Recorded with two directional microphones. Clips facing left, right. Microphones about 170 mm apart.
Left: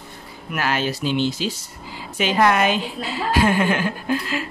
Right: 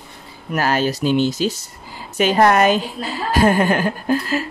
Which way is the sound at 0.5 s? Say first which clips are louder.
Right 4 dB; 40° right (ahead or behind).